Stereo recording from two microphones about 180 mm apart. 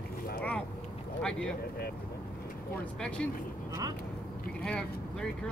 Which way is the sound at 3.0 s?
5° left (ahead or behind).